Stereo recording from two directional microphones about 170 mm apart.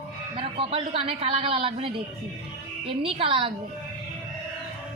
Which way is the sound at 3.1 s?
30° right (ahead or behind).